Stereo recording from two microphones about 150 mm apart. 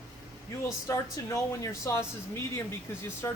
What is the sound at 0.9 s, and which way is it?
Speech, 20° left (ahead or behind).